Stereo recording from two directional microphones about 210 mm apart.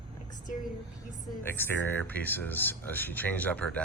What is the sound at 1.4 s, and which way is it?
Speech, 10° left (ahead or behind).